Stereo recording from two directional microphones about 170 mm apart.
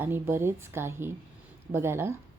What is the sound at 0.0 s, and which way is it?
A woman's voice, 15° right (ahead or behind).